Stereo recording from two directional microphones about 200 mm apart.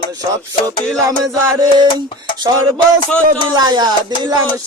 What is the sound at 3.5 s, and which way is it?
Speech, 20° right (ahead or behind).